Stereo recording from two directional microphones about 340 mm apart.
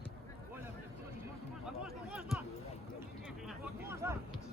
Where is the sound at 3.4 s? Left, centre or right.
Centre.